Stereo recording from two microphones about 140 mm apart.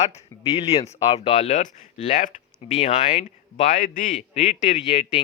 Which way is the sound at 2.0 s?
65° left (ahead or behind).